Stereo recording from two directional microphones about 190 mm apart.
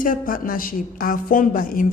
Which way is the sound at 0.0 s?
45° left (ahead or behind).